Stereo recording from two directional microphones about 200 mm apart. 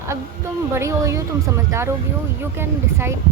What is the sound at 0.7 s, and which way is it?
Speech, 15° right (ahead or behind).